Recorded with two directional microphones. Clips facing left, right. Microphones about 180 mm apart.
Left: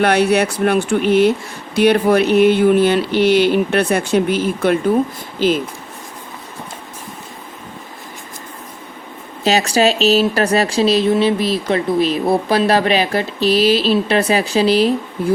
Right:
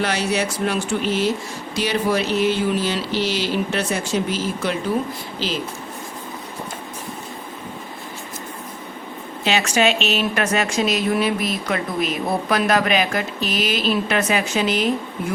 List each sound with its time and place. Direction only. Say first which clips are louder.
0.0 s a sound: left 8 dB; 60° left (ahead or behind)
5.4 s speech: left 11 dB; 50° left (ahead or behind)
9.4 s speech: left 4 dB; 40° left (ahead or behind)